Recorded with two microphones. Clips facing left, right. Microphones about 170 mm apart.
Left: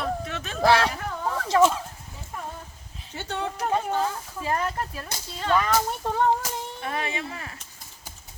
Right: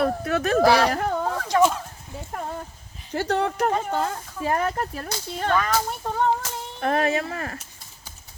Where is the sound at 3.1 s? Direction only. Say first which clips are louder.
Right 8 dB; 70° right (ahead or behind).